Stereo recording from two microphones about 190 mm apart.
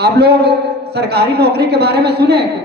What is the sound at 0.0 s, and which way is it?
A man's voice, 60° right (ahead or behind).